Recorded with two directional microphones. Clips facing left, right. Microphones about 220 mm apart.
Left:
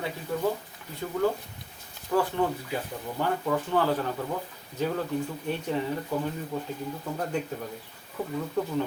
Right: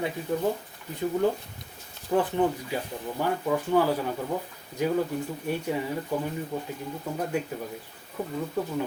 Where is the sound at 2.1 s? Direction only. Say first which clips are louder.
Right 2 dB; 20° right (ahead or behind).